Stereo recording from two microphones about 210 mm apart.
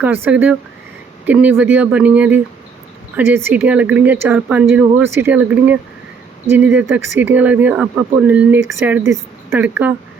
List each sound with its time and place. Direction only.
0.0 s speech: 10° right (ahead or behind)